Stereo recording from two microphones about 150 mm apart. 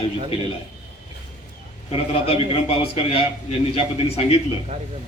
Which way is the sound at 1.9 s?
40° left (ahead or behind).